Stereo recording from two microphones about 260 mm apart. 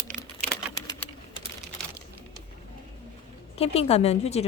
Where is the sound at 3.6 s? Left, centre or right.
Left.